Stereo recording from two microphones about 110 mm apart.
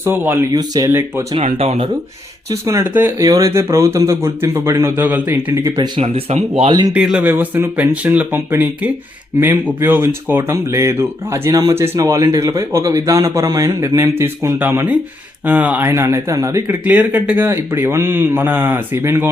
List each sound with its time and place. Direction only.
0.0 s speech: 20° right (ahead or behind)
0.5 s speech: 35° right (ahead or behind)
0.9 s speech: 20° right (ahead or behind)
1.3 s speech: 70° right (ahead or behind)
2.5 s speech: 30° right (ahead or behind)
2.8 s speech: 15° right (ahead or behind)
3.2 s speech: 30° right (ahead or behind)
6.0 s speech: 70° right (ahead or behind)
6.7 s speech: 40° right (ahead or behind)
6.9 s speech: 10° right (ahead or behind); by 16.6 s 30° right (ahead or behind)
16.6 s speech: 15° right (ahead or behind)